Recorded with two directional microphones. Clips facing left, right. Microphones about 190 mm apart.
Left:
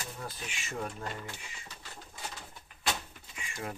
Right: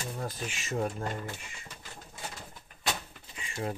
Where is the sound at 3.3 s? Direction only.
30° right (ahead or behind).